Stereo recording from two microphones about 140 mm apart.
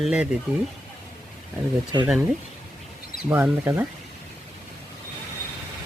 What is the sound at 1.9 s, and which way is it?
Speech, 30° right (ahead or behind).